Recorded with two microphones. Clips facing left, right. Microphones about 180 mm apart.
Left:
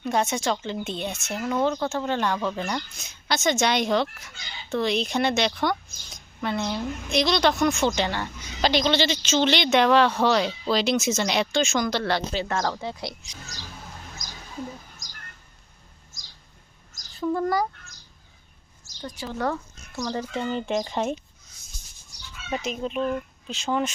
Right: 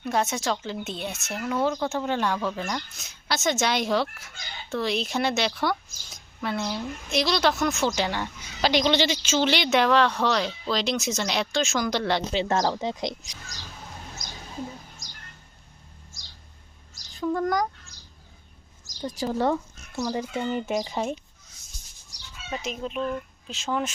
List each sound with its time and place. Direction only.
0.0 s speech: centre (ahead or behind)
11.9 s speech: 15° right (ahead or behind)
17.2 s speech: 5° left (ahead or behind)
19.1 s speech: 40° right (ahead or behind)
20.0 s speech: 10° right (ahead or behind)
22.6 s speech: centre (ahead or behind)
23.0 s speech: 35° left (ahead or behind)
23.5 s speech: centre (ahead or behind)